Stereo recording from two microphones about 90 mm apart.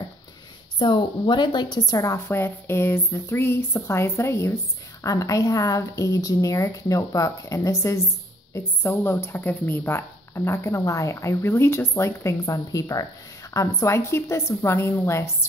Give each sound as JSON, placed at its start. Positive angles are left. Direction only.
{"t": 0.7, "sound": "a woman's voice", "side_deg": 60}
{"t": 2.2, "sound": "speech", "side_deg": 25}